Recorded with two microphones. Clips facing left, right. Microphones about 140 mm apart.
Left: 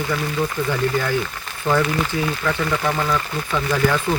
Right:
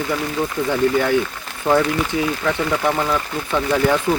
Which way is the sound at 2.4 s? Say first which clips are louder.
Right 2 dB; 20° right (ahead or behind).